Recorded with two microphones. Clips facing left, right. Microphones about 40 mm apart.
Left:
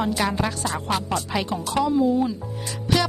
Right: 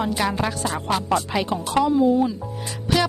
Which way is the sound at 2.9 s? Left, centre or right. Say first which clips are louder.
Right 1 dB; centre.